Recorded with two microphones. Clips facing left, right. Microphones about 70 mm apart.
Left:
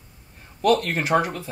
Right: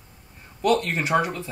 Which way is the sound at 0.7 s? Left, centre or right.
Left.